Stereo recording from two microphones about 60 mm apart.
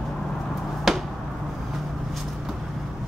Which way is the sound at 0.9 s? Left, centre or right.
Centre.